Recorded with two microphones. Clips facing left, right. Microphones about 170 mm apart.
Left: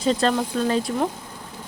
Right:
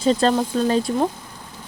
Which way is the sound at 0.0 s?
30° right (ahead or behind).